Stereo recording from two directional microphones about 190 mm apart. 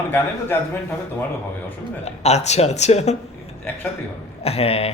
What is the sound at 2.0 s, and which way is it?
Speech, 35° left (ahead or behind).